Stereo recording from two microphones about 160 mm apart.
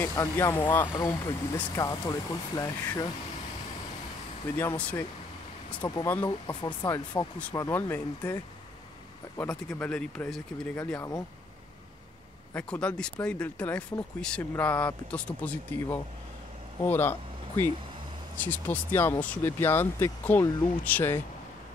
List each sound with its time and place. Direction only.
0.0 s speech: 15° left (ahead or behind)
4.6 s speech: 10° left (ahead or behind)
5.8 s speech: 25° left (ahead or behind)
9.4 s speech: 5° left (ahead or behind)
11.0 s speech: 25° left (ahead or behind)
12.5 s speech: 5° left (ahead or behind)